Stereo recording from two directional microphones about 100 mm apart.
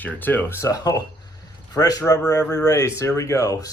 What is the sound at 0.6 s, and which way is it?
Speech, 40° left (ahead or behind).